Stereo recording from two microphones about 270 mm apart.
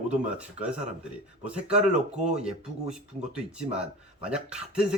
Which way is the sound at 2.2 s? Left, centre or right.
Right.